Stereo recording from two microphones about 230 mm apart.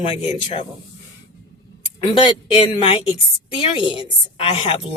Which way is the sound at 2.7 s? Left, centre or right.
Left.